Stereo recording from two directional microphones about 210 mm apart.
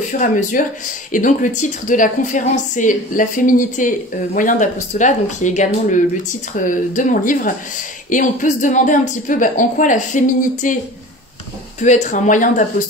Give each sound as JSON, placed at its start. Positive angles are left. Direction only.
{"t": 0.2, "sound": "speech", "side_deg": 40}
{"t": 11.8, "sound": "speech", "side_deg": 35}